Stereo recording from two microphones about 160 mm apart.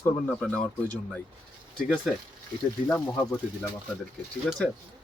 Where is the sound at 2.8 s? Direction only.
10° left (ahead or behind).